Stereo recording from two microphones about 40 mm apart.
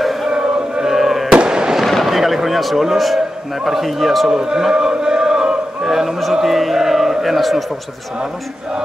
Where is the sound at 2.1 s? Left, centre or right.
Centre.